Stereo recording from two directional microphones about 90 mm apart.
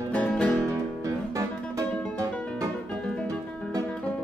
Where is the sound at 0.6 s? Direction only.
35° right (ahead or behind).